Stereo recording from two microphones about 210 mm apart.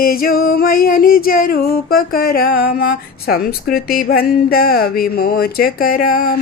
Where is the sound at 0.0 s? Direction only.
45° left (ahead or behind).